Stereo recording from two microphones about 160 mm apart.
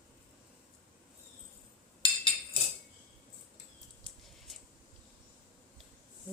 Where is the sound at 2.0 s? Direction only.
30° left (ahead or behind).